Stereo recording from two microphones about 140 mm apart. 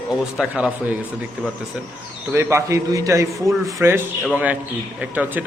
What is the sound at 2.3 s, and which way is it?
A man's voice, 20° right (ahead or behind).